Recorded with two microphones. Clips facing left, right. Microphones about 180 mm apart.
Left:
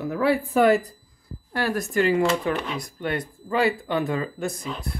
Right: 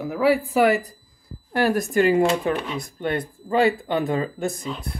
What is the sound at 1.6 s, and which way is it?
Speech, 15° right (ahead or behind).